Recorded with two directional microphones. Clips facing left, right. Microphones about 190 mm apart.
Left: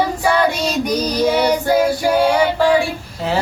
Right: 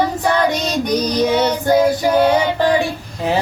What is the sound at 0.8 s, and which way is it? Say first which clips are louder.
Female singing: right 1 dB; 10° left (ahead or behind).